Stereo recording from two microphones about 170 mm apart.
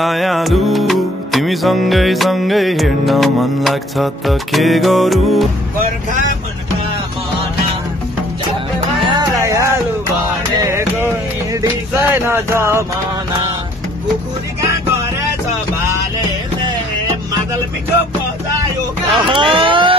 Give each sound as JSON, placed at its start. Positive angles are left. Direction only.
{"t": 0.0, "sound": "music", "side_deg": 0}
{"t": 9.0, "sound": "music", "side_deg": -25}
{"t": 19.1, "sound": "speech", "side_deg": -30}